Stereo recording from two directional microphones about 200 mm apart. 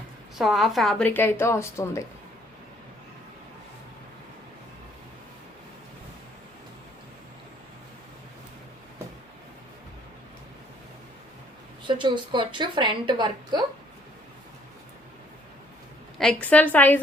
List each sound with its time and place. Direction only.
0.3 s a woman's voice: centre (ahead or behind)
11.9 s a woman's voice: 25° right (ahead or behind)
16.1 s a woman's voice: 5° left (ahead or behind)